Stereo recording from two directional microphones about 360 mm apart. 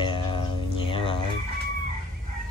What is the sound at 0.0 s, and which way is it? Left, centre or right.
Music, centre.